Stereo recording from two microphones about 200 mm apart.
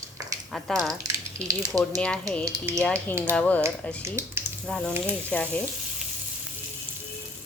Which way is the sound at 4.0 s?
10° right (ahead or behind).